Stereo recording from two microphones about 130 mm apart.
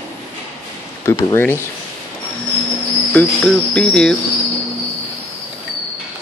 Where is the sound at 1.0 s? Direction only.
20° left (ahead or behind).